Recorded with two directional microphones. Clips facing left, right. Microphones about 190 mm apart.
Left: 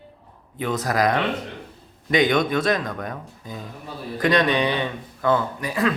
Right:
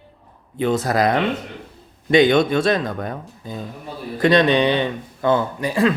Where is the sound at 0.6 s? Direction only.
30° right (ahead or behind).